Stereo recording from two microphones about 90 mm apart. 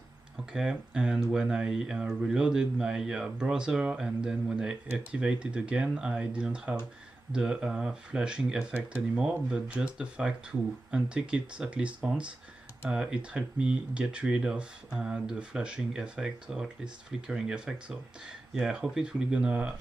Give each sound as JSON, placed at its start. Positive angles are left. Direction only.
{"t": 0.5, "sound": "speech", "side_deg": -5}